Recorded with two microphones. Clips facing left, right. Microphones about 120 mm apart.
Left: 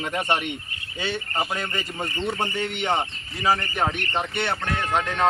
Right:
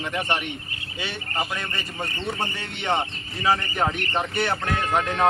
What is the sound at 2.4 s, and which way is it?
Speech, 15° left (ahead or behind).